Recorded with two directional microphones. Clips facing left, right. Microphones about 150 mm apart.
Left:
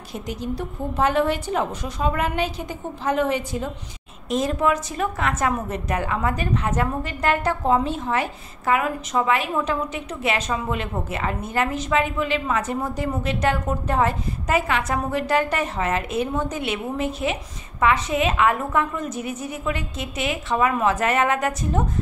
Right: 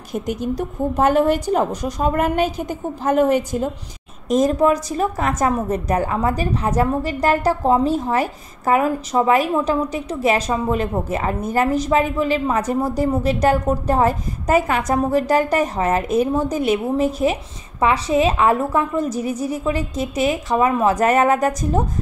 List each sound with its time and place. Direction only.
0.1 s a woman's voice: 50° right (ahead or behind)